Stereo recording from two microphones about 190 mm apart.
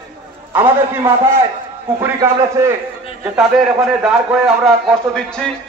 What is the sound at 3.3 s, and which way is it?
A man's voice, 5° right (ahead or behind).